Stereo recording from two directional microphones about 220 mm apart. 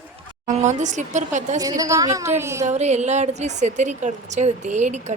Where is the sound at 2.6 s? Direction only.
30° right (ahead or behind).